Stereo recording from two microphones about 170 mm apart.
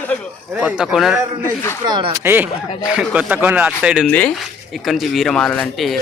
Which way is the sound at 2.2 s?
10° right (ahead or behind).